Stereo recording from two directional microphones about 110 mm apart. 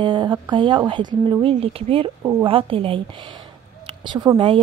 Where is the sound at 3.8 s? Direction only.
45° right (ahead or behind).